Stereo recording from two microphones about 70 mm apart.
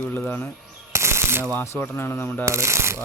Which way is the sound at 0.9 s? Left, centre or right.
Right.